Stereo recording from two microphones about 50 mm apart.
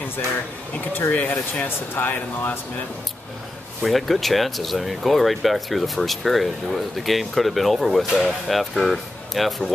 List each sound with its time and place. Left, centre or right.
1.1 s speech: left
3.8 s speech: centre